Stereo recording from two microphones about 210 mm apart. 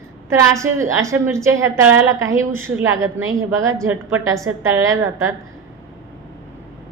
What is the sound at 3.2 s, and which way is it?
Speech, 70° right (ahead or behind).